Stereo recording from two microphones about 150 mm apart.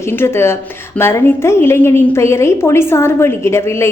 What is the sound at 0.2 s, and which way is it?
A woman's voice, 15° left (ahead or behind).